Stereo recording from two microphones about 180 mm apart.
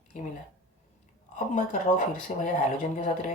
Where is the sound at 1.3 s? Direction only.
40° left (ahead or behind).